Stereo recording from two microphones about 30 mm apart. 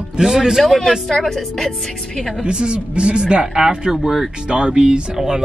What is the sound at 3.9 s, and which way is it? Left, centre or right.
Speech, centre.